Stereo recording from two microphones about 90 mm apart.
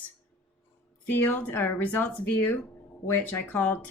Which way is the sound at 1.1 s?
20° left (ahead or behind).